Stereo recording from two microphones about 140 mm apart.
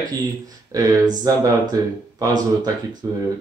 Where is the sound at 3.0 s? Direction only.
25° right (ahead or behind).